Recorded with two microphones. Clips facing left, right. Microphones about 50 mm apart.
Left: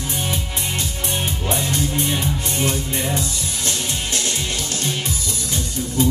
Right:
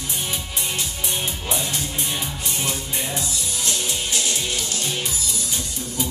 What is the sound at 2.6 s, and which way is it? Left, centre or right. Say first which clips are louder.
Music: left 4 dB; left.